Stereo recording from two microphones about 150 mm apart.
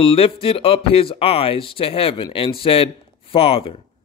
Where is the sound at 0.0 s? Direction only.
40° left (ahead or behind).